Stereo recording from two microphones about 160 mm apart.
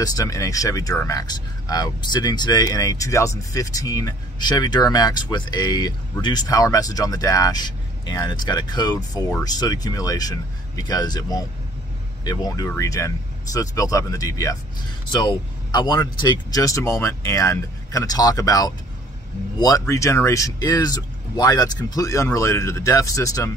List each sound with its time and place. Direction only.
0.0 s speech: 20° left (ahead or behind)